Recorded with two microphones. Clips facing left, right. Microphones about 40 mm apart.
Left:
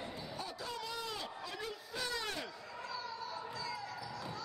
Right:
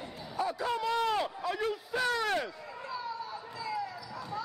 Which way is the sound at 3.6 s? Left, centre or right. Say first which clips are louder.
Right 12 dB; centre.